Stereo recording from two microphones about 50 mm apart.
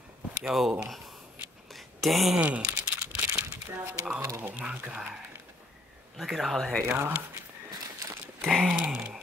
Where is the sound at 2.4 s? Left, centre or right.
Right.